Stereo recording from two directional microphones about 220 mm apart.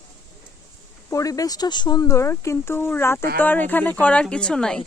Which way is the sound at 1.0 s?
15° left (ahead or behind).